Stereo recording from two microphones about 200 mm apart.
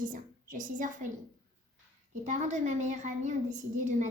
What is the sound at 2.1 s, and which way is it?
A woman's voice, 35° right (ahead or behind).